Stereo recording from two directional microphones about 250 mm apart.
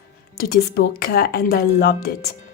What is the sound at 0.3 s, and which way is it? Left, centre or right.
A woman's voice, left.